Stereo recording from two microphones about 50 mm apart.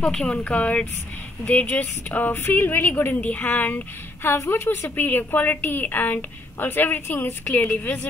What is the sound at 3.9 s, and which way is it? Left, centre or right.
A woman's voice, left.